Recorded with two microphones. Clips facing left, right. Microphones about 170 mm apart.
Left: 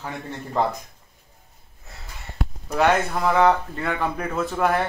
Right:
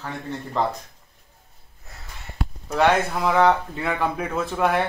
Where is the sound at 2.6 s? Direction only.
Centre (ahead or behind).